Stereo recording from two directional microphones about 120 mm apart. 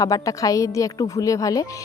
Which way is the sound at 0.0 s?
30° left (ahead or behind).